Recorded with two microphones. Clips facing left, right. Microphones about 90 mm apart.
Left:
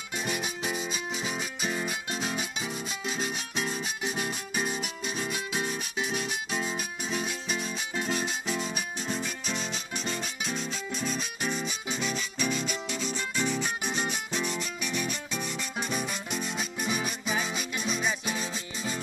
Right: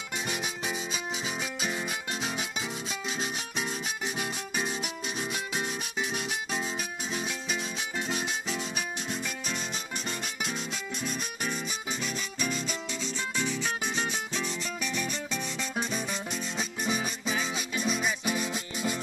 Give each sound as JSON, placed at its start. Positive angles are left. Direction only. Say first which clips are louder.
{"t": 0.7, "sound": "music", "louder": "left 1 dB", "side_deg": -10}
{"t": 6.5, "sound": "music", "louder": "left 1 dB", "side_deg": 0}
{"t": 13.0, "sound": "music", "louder": "left 1 dB", "side_deg": 10}
{"t": 16.5, "sound": "music", "louder": "right 3 dB", "side_deg": -30}
{"t": 17.7, "sound": "music", "louder": "right 1 dB", "side_deg": -5}